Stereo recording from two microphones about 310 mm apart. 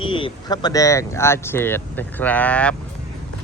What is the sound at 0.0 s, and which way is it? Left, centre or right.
Speech, centre.